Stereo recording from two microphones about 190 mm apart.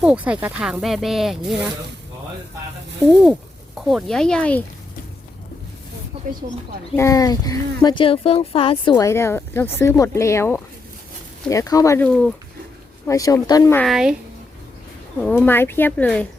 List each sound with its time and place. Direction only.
0.0 s speech: 5° right (ahead or behind)
3.8 s speech: centre (ahead or behind)
6.1 s a sound: 30° right (ahead or behind)
6.9 s speech: 15° left (ahead or behind)
13.1 s speech: 15° left (ahead or behind)
13.8 s speech: centre (ahead or behind)
15.2 s speech: 10° left (ahead or behind)